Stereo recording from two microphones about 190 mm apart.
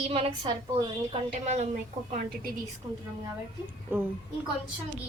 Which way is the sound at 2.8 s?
25° right (ahead or behind).